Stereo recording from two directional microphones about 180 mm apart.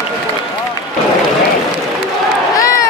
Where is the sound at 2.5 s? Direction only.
20° left (ahead or behind).